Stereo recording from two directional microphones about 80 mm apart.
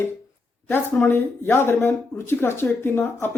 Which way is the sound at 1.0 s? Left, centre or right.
Left.